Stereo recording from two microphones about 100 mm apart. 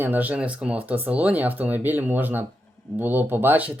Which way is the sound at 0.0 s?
15° right (ahead or behind).